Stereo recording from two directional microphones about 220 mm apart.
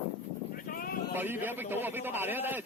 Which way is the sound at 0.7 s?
40° left (ahead or behind).